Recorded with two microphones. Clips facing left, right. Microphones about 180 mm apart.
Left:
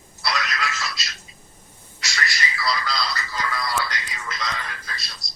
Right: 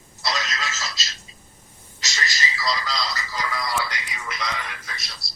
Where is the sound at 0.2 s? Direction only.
20° right (ahead or behind).